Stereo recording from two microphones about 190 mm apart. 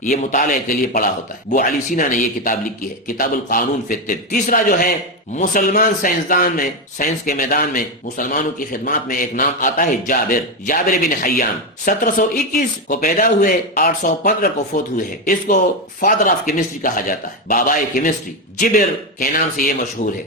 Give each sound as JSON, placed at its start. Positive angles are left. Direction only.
{"t": 0.0, "sound": "a man's voice", "side_deg": 40}